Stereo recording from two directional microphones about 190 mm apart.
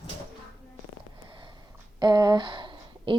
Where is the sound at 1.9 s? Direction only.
20° right (ahead or behind).